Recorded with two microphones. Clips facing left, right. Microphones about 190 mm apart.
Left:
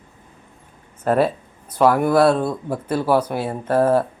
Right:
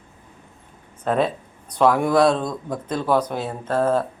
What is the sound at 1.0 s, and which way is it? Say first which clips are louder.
Speech: left 3 dB; 5° left (ahead or behind).